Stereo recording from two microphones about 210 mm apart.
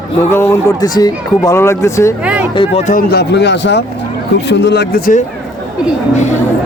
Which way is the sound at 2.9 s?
45° left (ahead or behind).